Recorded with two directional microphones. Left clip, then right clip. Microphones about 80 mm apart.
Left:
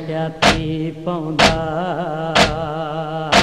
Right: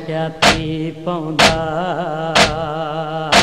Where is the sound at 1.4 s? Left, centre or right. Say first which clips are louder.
Right 2 dB; left.